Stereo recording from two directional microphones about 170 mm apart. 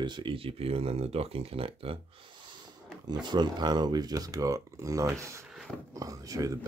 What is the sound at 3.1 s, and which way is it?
Speech, 25° right (ahead or behind).